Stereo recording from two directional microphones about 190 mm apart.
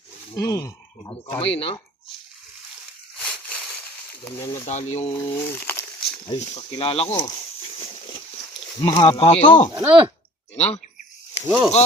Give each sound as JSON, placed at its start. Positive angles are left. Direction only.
{"t": 0.3, "sound": "speech", "side_deg": 15}
{"t": 1.4, "sound": "speech", "side_deg": 30}
{"t": 3.2, "sound": "a sound", "side_deg": 5}
{"t": 4.3, "sound": "speech", "side_deg": 15}
{"t": 4.6, "sound": "speech", "side_deg": 35}
{"t": 5.1, "sound": "speech", "side_deg": 15}
{"t": 6.2, "sound": "speech", "side_deg": 30}
{"t": 8.8, "sound": "speech", "side_deg": 20}
{"t": 9.2, "sound": "speech", "side_deg": 35}
{"t": 9.7, "sound": "speech", "side_deg": -20}
{"t": 10.5, "sound": "speech", "side_deg": 35}
{"t": 11.4, "sound": "speech", "side_deg": -10}